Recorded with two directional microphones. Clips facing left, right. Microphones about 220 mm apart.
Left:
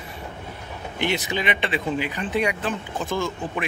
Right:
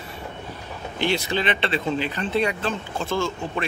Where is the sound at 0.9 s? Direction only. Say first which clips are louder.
Right 2 dB; 20° left (ahead or behind).